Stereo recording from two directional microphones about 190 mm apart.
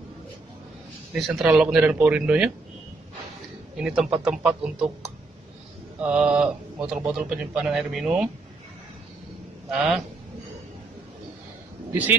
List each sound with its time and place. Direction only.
1.1 s speech: 5° right (ahead or behind)
3.7 s speech: 5° right (ahead or behind)
5.9 s speech: 5° right (ahead or behind)
9.7 s speech: centre (ahead or behind)